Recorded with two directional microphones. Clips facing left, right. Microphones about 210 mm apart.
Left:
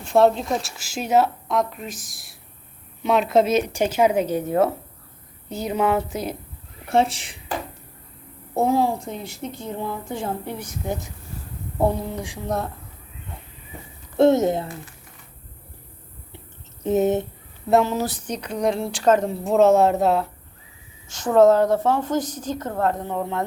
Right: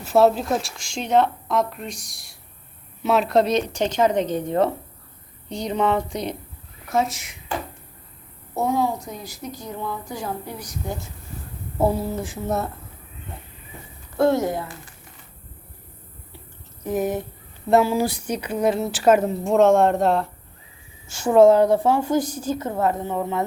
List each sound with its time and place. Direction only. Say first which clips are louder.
0.0 s speech: even; 5° right (ahead or behind)
6.8 s speech: left 3 dB; 30° left (ahead or behind)
8.5 s a woman's voice: left 2 dB; 30° left (ahead or behind)
11.8 s speech: right 1 dB; 5° right (ahead or behind)
14.2 s a woman's voice: left 3 dB; 20° left (ahead or behind)
16.8 s a woman's voice: left 4 dB; 25° left (ahead or behind)
17.7 s a woman's voice: right 1 dB; 5° right (ahead or behind)
21.1 s a woman's voice: right 1 dB; 10° right (ahead or behind)